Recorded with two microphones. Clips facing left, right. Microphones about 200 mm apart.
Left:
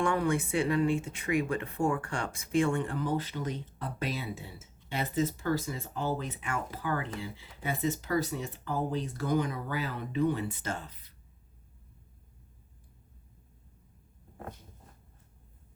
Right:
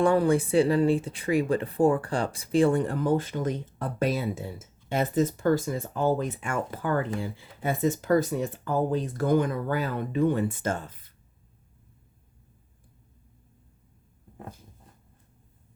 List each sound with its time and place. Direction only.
0.0 s speech: 35° right (ahead or behind)